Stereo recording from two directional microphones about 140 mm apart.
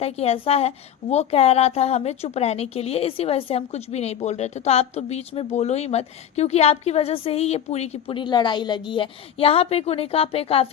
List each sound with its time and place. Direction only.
0.0 s a woman's voice: 45° left (ahead or behind)